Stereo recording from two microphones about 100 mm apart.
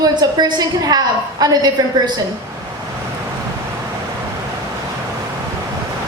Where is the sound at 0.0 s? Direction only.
45° right (ahead or behind).